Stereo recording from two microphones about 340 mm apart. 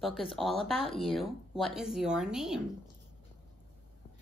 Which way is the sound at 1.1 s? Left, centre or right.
Centre.